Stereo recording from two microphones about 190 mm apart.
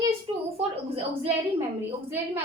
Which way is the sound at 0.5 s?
30° right (ahead or behind).